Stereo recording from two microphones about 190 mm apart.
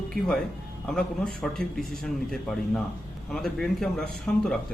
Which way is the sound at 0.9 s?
5° left (ahead or behind).